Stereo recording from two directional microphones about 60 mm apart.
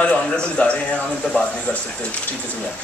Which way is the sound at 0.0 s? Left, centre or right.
Centre.